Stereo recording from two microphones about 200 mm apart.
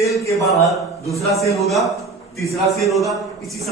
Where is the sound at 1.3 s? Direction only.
Centre (ahead or behind).